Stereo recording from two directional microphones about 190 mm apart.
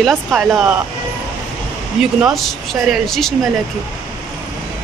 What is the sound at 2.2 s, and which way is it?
Speech, centre (ahead or behind).